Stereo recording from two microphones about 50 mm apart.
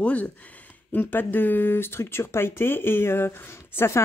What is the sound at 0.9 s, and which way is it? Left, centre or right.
Speech, left.